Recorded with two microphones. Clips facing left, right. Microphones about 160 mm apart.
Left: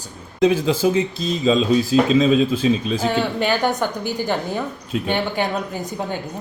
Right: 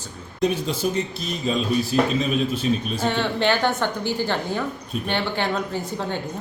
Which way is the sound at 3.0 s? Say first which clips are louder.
Even; 10° left (ahead or behind).